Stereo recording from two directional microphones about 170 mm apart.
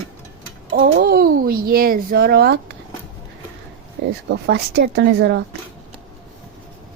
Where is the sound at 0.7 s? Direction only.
65° right (ahead or behind).